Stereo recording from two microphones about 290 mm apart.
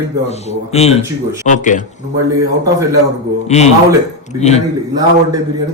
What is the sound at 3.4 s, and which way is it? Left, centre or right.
A man's voice, left.